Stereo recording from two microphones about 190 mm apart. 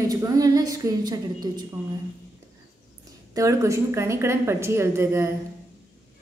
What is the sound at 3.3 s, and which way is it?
A woman's voice, 15° right (ahead or behind).